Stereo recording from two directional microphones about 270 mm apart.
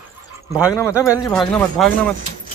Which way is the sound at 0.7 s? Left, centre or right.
Centre.